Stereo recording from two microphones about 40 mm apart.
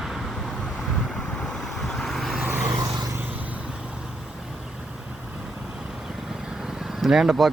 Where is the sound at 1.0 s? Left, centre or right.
Centre.